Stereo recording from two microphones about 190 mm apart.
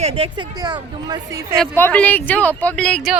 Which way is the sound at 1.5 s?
5° left (ahead or behind).